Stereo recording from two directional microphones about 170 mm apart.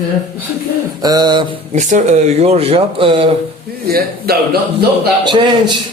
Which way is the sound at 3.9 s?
65° right (ahead or behind).